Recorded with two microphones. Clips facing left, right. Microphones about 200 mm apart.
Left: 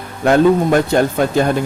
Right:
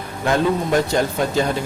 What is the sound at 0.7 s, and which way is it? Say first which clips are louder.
Speech: left 5 dB; 55° left (ahead or behind).